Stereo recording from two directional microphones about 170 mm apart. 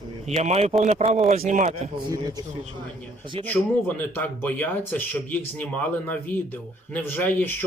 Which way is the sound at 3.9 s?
10° left (ahead or behind).